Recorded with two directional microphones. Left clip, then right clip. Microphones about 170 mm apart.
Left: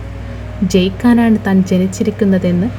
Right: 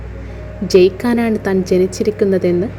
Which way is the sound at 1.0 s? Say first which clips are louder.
Left 3 dB; 35° right (ahead or behind).